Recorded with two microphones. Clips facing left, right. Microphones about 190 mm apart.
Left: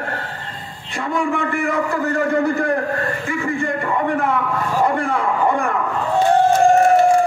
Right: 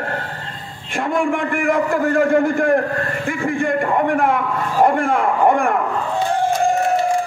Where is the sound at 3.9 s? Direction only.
60° right (ahead or behind).